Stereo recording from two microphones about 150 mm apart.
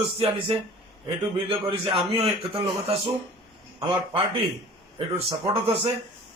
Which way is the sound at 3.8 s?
35° right (ahead or behind).